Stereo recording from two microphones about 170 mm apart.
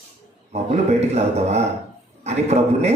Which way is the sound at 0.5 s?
40° right (ahead or behind).